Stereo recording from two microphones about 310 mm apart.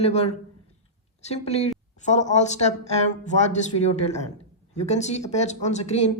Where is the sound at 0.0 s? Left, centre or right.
Left.